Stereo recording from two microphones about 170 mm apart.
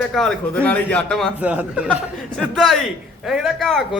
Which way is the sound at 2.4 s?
Centre (ahead or behind).